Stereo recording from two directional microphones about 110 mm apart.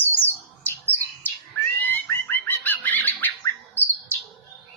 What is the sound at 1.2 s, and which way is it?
Cat, 20° left (ahead or behind).